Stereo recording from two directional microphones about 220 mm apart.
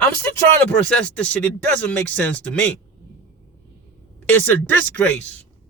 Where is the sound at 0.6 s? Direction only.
5° left (ahead or behind).